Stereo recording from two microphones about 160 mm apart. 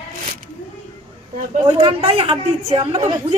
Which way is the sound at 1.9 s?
40° right (ahead or behind).